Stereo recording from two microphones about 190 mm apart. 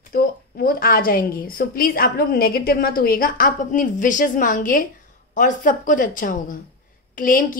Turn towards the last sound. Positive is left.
turn(degrees=45)  # may be behind; listen again after turning